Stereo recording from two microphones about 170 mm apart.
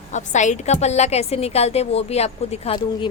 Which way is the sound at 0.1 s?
45° left (ahead or behind).